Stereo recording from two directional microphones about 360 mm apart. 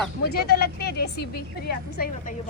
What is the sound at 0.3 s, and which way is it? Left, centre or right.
A woman's voice, left.